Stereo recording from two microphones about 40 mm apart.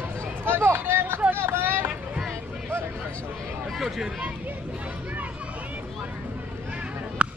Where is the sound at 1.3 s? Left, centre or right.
Right.